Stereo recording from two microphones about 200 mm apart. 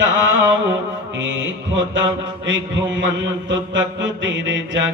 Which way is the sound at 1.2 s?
70° right (ahead or behind).